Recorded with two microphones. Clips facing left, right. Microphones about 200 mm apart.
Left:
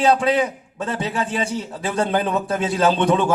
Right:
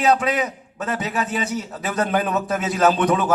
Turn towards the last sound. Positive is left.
turn(degrees=30)  # may be behind; listen again after turning